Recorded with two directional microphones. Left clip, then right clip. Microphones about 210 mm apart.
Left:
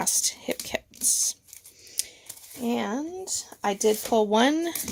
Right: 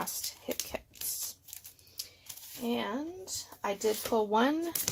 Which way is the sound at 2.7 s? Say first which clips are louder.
Left 5 dB; 65° left (ahead or behind).